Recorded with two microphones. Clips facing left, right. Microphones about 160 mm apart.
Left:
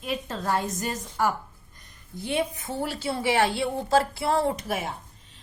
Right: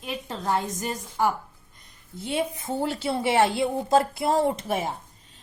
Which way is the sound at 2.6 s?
20° right (ahead or behind).